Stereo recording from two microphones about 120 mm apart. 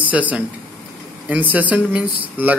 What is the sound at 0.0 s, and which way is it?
Speech, 15° right (ahead or behind).